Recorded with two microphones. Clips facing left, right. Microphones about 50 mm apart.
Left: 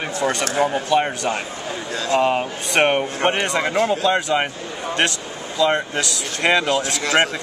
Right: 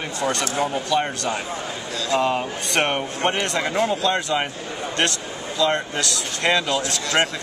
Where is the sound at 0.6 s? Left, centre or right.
Left.